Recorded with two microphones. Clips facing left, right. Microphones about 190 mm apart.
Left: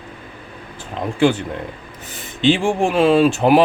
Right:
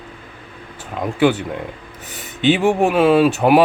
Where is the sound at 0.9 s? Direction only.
5° right (ahead or behind).